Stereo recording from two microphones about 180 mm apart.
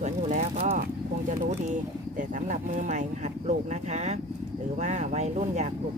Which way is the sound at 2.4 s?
45° right (ahead or behind).